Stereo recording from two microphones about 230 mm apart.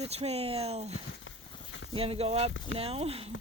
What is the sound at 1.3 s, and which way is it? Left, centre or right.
Clip-clop, left.